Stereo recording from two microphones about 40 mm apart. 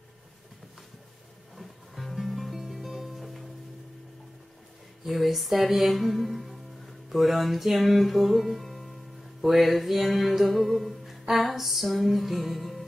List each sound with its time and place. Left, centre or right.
1.6 s music: centre
5.0 s music: centre